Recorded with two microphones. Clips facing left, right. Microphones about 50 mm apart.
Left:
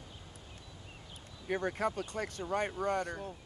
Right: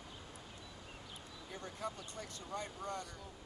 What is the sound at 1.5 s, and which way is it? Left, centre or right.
Speech, left.